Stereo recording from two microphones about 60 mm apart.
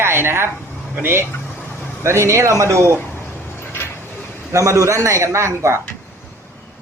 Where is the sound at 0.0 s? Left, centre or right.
Right.